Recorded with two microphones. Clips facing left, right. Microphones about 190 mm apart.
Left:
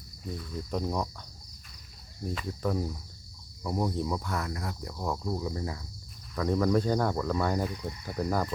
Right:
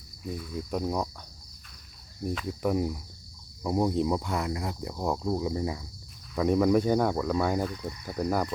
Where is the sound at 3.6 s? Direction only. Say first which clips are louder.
Right 5 dB; 20° right (ahead or behind).